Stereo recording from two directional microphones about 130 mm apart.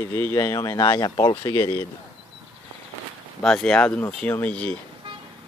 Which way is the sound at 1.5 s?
20° left (ahead or behind).